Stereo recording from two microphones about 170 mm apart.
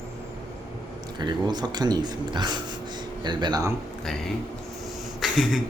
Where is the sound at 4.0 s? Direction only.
Centre (ahead or behind).